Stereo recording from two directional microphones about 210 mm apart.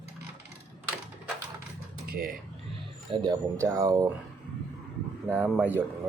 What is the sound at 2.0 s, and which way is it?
Speech, 45° right (ahead or behind).